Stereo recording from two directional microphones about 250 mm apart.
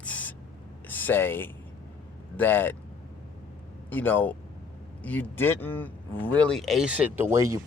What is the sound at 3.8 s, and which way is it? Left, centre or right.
Speech, centre.